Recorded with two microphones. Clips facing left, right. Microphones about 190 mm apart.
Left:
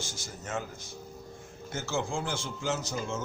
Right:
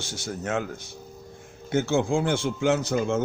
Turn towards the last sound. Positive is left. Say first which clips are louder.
# right 9 dB
turn(degrees=-60)  # may be behind; listen again after turning